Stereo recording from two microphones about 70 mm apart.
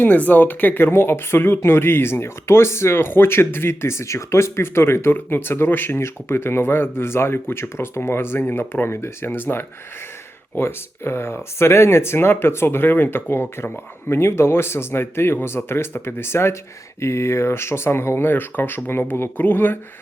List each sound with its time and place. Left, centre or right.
0.0 s speech: left